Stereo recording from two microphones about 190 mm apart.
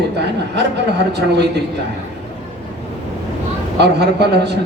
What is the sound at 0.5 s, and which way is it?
Speech, 65° right (ahead or behind).